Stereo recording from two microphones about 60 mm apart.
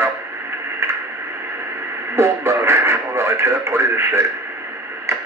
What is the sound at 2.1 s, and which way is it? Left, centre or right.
Radio, right.